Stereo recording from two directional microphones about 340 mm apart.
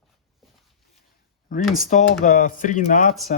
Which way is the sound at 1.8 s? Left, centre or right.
Left.